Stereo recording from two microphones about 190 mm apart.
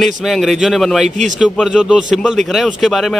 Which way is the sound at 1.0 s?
40° right (ahead or behind).